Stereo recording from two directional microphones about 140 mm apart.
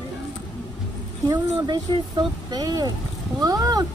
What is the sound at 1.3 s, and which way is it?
Speech, 35° right (ahead or behind).